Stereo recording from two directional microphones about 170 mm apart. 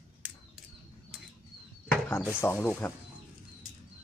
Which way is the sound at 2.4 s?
10° left (ahead or behind).